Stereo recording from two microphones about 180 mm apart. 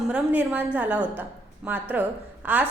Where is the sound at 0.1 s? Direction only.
10° right (ahead or behind).